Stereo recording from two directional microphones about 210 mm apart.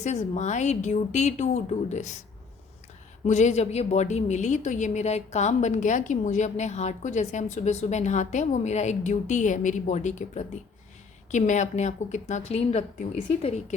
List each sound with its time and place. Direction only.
0.0 s a woman's voice: 35° left (ahead or behind)
3.2 s a woman's voice: 35° left (ahead or behind)